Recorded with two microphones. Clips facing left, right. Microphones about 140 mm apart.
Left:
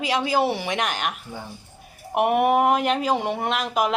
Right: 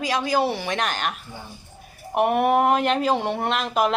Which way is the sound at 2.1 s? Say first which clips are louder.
Even; 15° left (ahead or behind).